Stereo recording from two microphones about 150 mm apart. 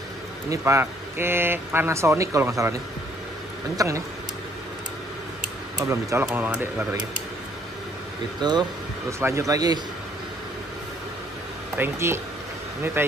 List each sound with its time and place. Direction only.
0.5 s speech: 20° right (ahead or behind)
5.9 s speech: 20° right (ahead or behind)
8.4 s speech: 30° right (ahead or behind)
11.7 s speech: 15° right (ahead or behind)